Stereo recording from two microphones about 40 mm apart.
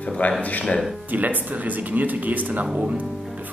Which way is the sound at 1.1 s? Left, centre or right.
Right.